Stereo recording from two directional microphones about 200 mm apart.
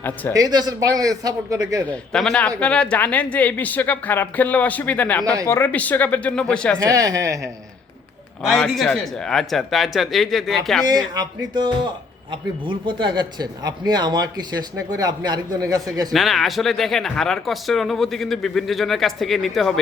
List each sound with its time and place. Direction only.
0.3 s a man's voice: 20° right (ahead or behind)
1.9 s speech: 5° left (ahead or behind)
5.2 s a man's voice: 20° right (ahead or behind)
5.5 s speech: 10° left (ahead or behind)
6.7 s a man's voice: 15° right (ahead or behind)
8.4 s speech: centre (ahead or behind)
10.8 s a man's voice: 20° right (ahead or behind)
16.1 s speech: centre (ahead or behind)